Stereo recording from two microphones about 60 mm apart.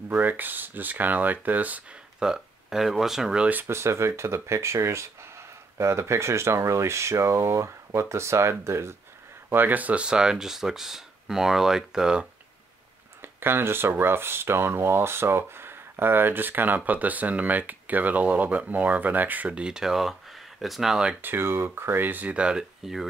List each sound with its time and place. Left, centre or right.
0.1 s speech: right
2.1 s speech: centre
3.6 s speech: right
9.5 s speech: right; by 12.3 s centre
13.2 s speech: right; by 21.1 s centre
21.2 s speech: right; by 22.7 s centre